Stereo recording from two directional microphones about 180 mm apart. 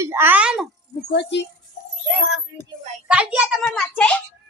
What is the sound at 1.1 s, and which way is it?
Speech, 70° left (ahead or behind).